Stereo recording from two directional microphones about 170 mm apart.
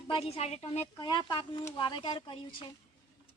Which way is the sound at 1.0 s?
25° left (ahead or behind).